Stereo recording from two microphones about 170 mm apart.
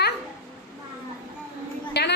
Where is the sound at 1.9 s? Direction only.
80° left.